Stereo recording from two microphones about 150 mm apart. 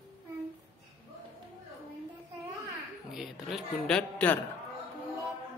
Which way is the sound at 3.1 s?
Centre (ahead or behind).